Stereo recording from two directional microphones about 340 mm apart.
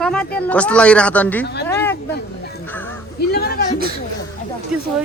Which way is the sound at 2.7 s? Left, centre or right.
Centre.